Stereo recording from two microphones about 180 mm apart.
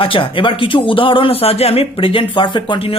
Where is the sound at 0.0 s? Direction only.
30° left (ahead or behind).